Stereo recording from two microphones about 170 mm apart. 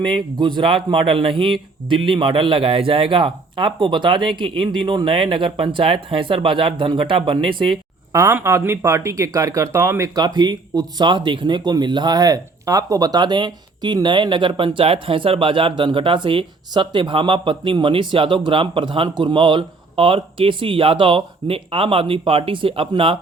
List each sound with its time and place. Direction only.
0.0 s speech: 30° right (ahead or behind)
8.1 s speech: 15° right (ahead or behind); by 23.1 s 30° right (ahead or behind)